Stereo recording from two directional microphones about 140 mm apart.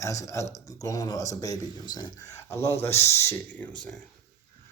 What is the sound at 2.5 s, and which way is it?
Speech, 20° left (ahead or behind).